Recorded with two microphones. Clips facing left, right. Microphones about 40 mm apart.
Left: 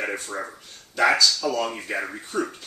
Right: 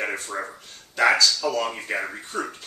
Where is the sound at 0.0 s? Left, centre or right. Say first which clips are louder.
Right 1 dB; centre.